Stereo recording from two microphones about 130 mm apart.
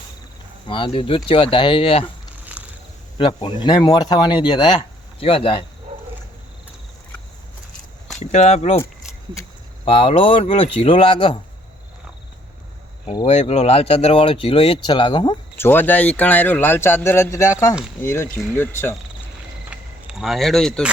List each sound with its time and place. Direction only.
0.7 s speech: 40° left (ahead or behind)
3.2 s speech: 40° left (ahead or behind)
8.2 s speech: 60° left (ahead or behind)
9.8 s speech: 45° left (ahead or behind)
13.1 s speech: 40° left (ahead or behind)
13.3 s speech: 55° left (ahead or behind); by 15.4 s 35° left (ahead or behind)
15.5 s speech: 15° left (ahead or behind)
19.7 s a sound: 5° right (ahead or behind)